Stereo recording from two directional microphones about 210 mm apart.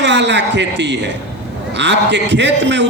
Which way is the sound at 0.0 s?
55° right (ahead or behind).